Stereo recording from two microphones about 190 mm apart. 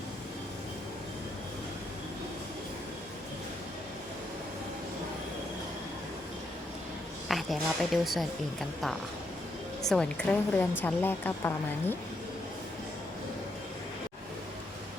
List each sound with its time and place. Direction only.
7.3 s speech: centre (ahead or behind)
9.8 s a woman's voice: 5° left (ahead or behind)